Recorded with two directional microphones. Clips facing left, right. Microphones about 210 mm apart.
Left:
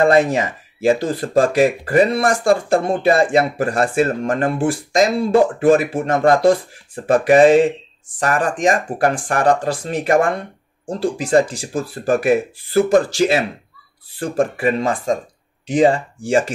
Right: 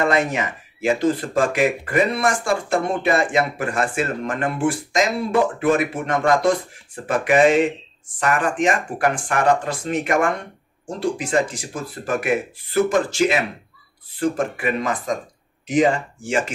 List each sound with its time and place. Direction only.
0.0 s speech: 30° left (ahead or behind)